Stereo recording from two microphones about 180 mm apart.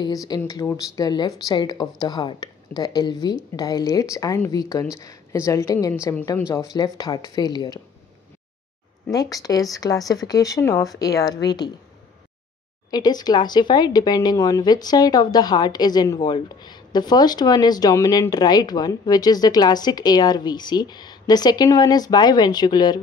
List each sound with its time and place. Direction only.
0.0 s a woman's voice: 20° left (ahead or behind)
9.1 s speech: 20° left (ahead or behind)
12.9 s speech: 20° left (ahead or behind)